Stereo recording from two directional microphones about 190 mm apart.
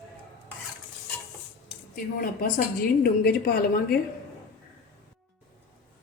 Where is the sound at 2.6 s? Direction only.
50° left (ahead or behind).